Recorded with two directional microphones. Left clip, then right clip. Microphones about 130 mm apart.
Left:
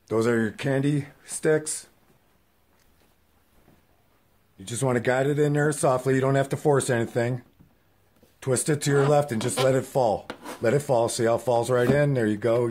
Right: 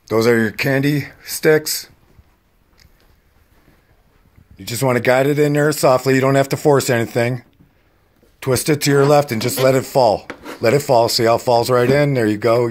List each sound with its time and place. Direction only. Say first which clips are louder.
0.1 s speech: right 9 dB; 15° right (ahead or behind)
4.6 s speech: right 8 dB; 10° right (ahead or behind)